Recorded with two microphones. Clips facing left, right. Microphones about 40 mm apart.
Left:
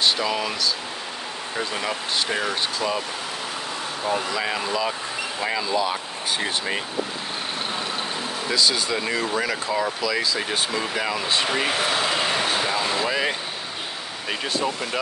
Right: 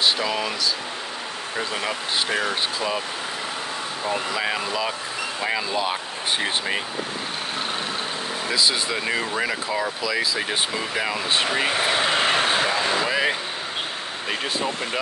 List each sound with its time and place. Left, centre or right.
0.0 s speech: centre
1.6 s speech: centre
4.0 s speech: centre
5.8 s speech: right
8.5 s speech: centre
11.8 s speech: right
12.2 s vehicle: right
12.6 s speech: centre
14.4 s speech: centre